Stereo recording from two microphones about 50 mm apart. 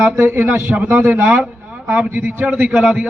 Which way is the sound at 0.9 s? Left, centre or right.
Right.